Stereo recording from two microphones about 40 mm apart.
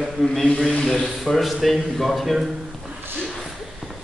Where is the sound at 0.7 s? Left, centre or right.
Centre.